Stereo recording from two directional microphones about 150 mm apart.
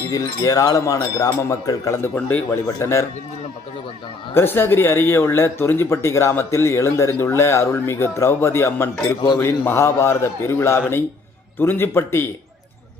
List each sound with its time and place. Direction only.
0.1 s speech: 25° left (ahead or behind)
4.4 s speech: 15° left (ahead or behind)